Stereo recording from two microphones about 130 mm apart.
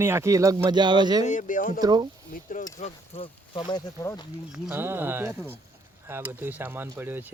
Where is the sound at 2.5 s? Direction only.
70° left (ahead or behind).